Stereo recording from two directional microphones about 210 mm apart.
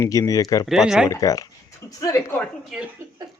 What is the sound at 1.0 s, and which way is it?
Speech, 15° left (ahead or behind).